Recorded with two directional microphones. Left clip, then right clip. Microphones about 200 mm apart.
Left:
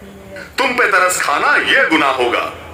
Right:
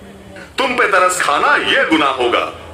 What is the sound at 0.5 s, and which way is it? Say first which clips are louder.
A man's voice: even; 15° left (ahead or behind).